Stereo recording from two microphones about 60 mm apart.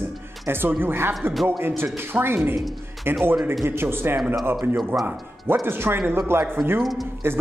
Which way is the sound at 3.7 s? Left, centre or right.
Right.